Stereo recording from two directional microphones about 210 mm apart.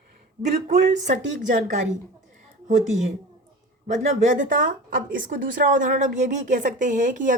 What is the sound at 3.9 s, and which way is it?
A man's voice, 35° right (ahead or behind).